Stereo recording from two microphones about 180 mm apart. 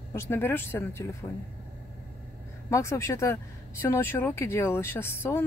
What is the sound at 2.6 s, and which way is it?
Speech, 15° left (ahead or behind).